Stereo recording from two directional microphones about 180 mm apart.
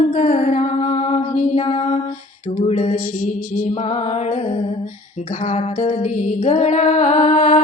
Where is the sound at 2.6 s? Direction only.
35° left (ahead or behind).